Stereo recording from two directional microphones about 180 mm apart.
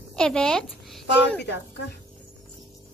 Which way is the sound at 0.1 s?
5° left (ahead or behind).